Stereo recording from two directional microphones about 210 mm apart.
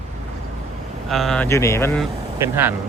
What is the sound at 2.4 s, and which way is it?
Speech, 10° right (ahead or behind).